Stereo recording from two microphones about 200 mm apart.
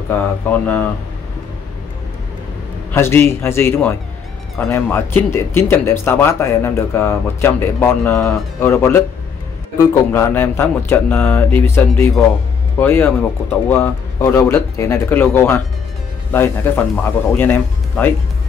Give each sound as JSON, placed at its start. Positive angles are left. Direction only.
{"t": 0.1, "sound": "speech", "side_deg": 10}
{"t": 2.9, "sound": "speech", "side_deg": 10}